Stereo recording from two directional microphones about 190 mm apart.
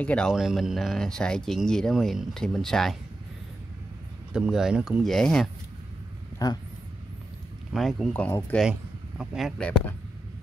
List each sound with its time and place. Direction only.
0.0 s speech: 5° left (ahead or behind)
4.3 s speech: 5° right (ahead or behind)
6.3 s speech: 20° left (ahead or behind)
7.7 s speech: centre (ahead or behind)
9.2 s speech: centre (ahead or behind)